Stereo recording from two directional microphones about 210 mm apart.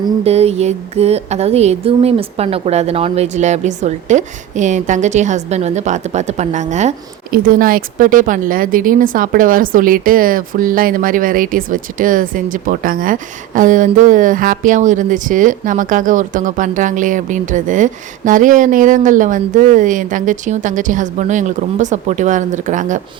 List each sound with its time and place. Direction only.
0.0 s a woman's voice: 30° right (ahead or behind)